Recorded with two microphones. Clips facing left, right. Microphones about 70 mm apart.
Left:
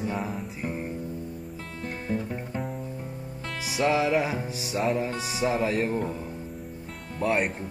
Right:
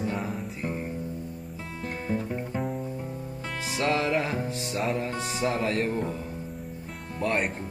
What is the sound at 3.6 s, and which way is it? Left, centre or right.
Speech, centre.